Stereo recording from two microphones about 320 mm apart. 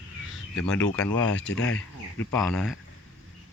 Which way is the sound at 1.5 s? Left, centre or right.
Left.